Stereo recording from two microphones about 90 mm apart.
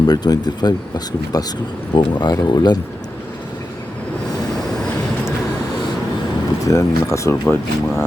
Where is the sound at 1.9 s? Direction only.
60° left (ahead or behind).